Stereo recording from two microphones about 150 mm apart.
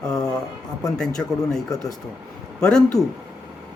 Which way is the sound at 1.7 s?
25° left (ahead or behind).